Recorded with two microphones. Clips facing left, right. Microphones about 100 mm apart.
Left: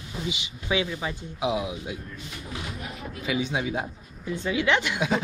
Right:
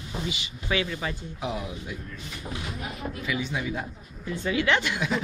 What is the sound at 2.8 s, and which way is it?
Speech, centre (ahead or behind).